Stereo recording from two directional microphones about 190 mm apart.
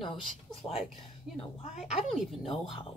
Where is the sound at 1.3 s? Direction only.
40° left (ahead or behind).